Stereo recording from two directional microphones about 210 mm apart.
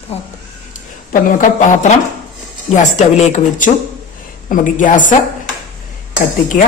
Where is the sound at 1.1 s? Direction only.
40° left (ahead or behind).